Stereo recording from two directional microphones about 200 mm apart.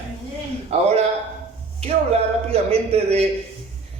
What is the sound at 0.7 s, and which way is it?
Speech, 30° right (ahead or behind).